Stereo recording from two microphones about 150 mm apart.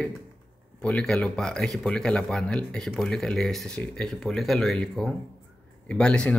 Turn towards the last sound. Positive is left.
turn(degrees=10)  # may be behind; listen again after turning